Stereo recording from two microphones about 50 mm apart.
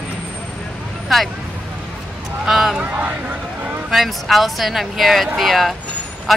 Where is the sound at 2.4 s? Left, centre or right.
Centre.